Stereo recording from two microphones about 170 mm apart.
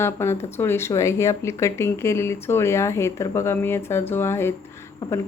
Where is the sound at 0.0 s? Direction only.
15° left (ahead or behind).